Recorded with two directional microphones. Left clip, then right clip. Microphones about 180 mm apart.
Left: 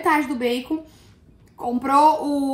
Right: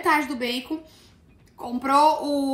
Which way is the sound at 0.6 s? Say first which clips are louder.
Left 4 dB; 15° right (ahead or behind).